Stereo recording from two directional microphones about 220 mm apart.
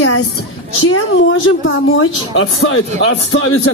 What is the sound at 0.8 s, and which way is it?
A woman's voice, 65° left (ahead or behind).